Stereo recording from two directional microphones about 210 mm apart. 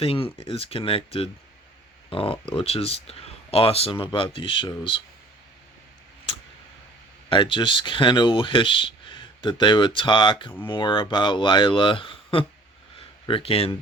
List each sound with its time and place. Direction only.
0.0 s speech: 25° left (ahead or behind)
7.3 s speech: 25° left (ahead or behind)